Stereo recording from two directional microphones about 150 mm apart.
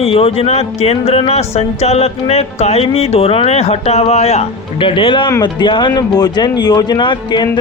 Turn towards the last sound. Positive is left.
turn(degrees=30)  # may be behind; listen again after turning